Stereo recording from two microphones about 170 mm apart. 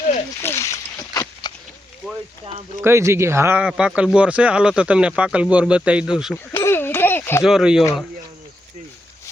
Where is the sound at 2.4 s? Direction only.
40° right (ahead or behind).